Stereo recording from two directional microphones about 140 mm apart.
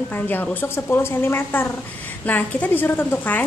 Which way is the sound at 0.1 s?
10° left (ahead or behind).